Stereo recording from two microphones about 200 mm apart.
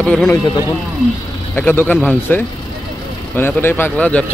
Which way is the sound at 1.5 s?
10° left (ahead or behind).